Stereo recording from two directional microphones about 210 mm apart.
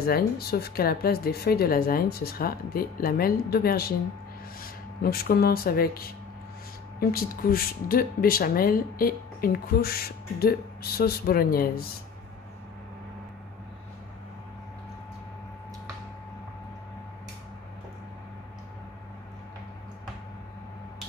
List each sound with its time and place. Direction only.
0.0 s speech: 45° left (ahead or behind)